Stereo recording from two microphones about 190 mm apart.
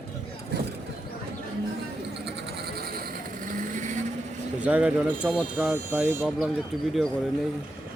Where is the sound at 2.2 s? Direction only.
60° right (ahead or behind); by 3.9 s 40° right (ahead or behind).